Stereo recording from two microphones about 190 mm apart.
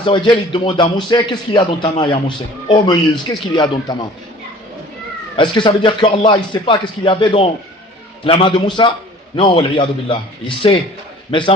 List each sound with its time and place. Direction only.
0.0 s a man's voice: 25° left (ahead or behind)
5.4 s a man's voice: 25° left (ahead or behind)
11.3 s a man's voice: 25° left (ahead or behind)